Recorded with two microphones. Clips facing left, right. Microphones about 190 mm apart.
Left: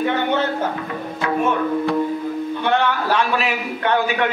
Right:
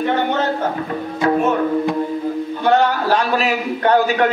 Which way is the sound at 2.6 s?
40° right (ahead or behind).